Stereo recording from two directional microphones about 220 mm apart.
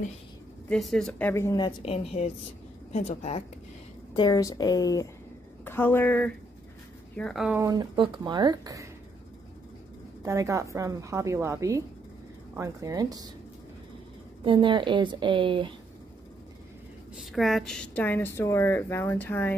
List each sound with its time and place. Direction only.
0.7 s a woman's voice: centre (ahead or behind); by 3.4 s 30° left (ahead or behind)
4.1 s a woman's voice: 20° left (ahead or behind); by 7.6 s centre (ahead or behind)
7.6 s a woman's voice: 20° right (ahead or behind)
10.2 s a woman's voice: 15° right (ahead or behind)
14.4 s a woman's voice: 20° right (ahead or behind)
17.2 s a woman's voice: centre (ahead or behind)